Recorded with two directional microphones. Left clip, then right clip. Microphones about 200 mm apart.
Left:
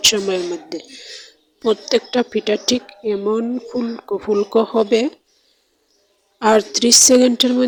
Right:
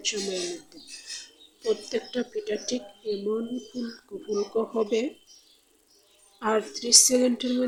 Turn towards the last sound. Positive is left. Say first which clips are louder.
# left 11 dB
turn(degrees=35)  # may be behind; listen again after turning